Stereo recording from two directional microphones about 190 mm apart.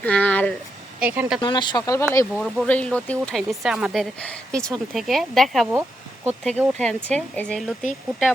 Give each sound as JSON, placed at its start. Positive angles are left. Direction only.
{"t": 0.0, "sound": "a sound", "side_deg": 5}
{"t": 0.9, "sound": "speech", "side_deg": -10}
{"t": 1.4, "sound": "speech", "side_deg": 25}